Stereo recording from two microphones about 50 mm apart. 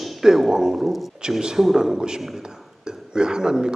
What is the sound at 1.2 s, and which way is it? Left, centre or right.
A man's voice, centre.